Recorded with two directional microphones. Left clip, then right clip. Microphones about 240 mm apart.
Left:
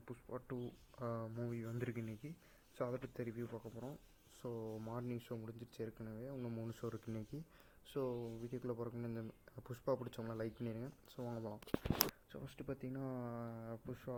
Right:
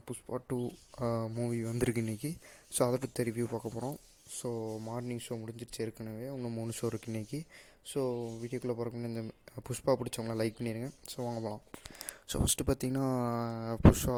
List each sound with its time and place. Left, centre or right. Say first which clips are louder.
0.1 s speech: right 10 dB; right
7.9 s speech: right 8 dB; right
12.3 s speech: right 16 dB; right